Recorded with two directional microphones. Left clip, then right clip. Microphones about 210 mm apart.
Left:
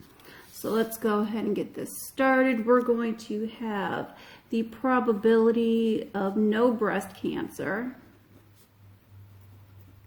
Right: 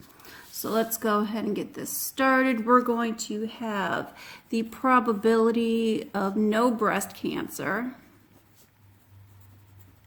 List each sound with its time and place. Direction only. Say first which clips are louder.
0.3 s a woman's voice: left 1 dB; 20° right (ahead or behind)